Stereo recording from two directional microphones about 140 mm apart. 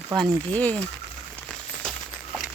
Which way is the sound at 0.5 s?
10° left (ahead or behind).